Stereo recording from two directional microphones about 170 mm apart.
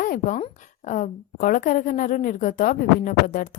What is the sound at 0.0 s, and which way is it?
A woman's voice, 50° left (ahead or behind).